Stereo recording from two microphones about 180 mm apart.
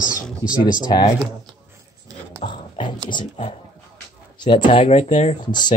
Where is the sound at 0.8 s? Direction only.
25° left (ahead or behind).